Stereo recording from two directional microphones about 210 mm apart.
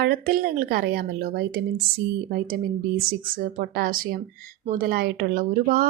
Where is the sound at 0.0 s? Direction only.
45° right (ahead or behind).